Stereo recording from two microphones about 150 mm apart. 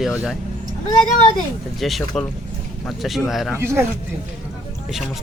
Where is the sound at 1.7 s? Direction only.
Centre (ahead or behind).